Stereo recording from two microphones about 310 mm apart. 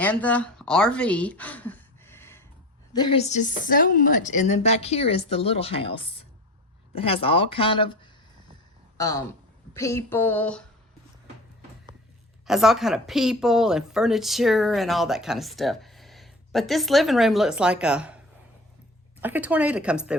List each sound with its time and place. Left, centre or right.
0.0 s a sound: centre
2.9 s speech: centre
12.5 s speech: centre
19.2 s speech: centre